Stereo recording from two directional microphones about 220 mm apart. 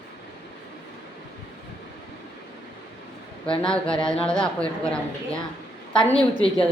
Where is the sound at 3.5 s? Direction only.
5° left (ahead or behind).